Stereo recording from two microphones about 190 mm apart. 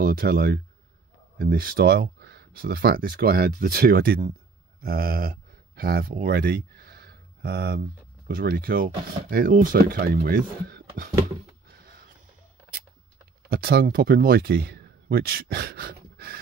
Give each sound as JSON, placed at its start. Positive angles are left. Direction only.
{"t": 0.0, "sound": "speech", "side_deg": -50}
{"t": 11.7, "sound": "a sound", "side_deg": -50}
{"t": 13.5, "sound": "speech", "side_deg": -55}